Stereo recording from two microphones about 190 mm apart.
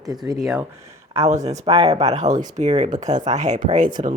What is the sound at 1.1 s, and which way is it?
Speech, 35° right (ahead or behind).